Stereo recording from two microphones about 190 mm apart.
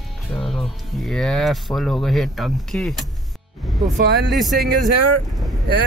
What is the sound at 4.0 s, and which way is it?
Speech, 60° right (ahead or behind).